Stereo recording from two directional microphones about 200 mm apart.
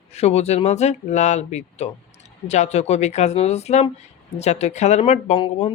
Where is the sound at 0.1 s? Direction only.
30° left (ahead or behind).